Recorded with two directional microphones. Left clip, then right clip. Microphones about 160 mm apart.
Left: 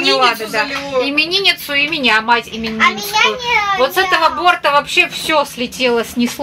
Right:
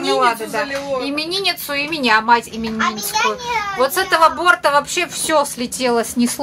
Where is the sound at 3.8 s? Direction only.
10° right (ahead or behind).